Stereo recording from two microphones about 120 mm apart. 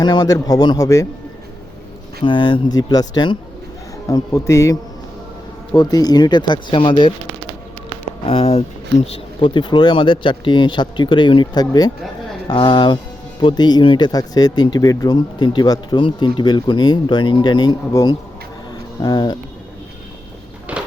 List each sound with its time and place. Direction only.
0.0 s speech: 35° left (ahead or behind)
2.2 s speech: 40° left (ahead or behind)
8.2 s speech: 50° left (ahead or behind)
9.5 s speech: 40° left (ahead or behind)
20.7 s a sound: 10° right (ahead or behind)